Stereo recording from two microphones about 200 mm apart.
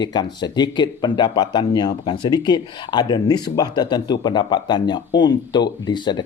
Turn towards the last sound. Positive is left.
turn(degrees=20)  # may be behind; listen again after turning